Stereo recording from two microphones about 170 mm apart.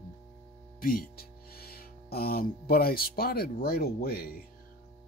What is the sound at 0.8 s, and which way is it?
Speech, 60° left (ahead or behind).